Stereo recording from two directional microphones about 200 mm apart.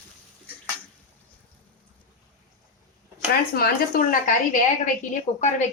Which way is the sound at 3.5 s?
45° left (ahead or behind).